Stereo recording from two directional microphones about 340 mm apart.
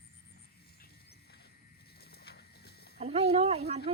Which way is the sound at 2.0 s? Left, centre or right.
Left.